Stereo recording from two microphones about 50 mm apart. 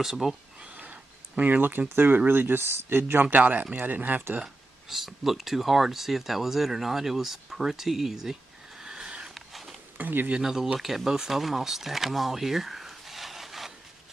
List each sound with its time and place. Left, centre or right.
0.0 s speech: centre
0.7 s speech: right
4.8 s speech: centre
8.8 s a sound: centre
9.3 s a sound: centre
9.9 s speech: right
10.4 s speech: centre